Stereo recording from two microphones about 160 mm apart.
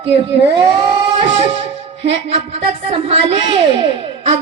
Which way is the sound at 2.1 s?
40° right (ahead or behind).